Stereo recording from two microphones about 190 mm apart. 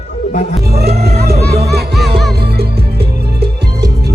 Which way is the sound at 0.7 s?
55° right (ahead or behind).